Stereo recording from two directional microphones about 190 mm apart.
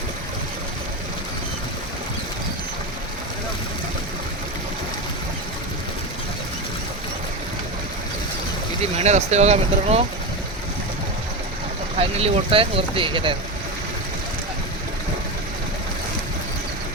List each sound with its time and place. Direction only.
8.8 s speech: 35° right (ahead or behind)
11.9 s speech: 30° right (ahead or behind)